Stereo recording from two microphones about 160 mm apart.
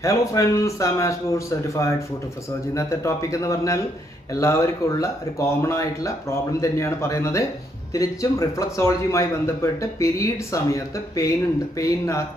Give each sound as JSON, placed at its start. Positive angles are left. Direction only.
{"t": 0.0, "sound": "a man's voice", "side_deg": 20}